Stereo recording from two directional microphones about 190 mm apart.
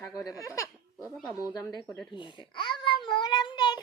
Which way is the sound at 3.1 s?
25° left (ahead or behind).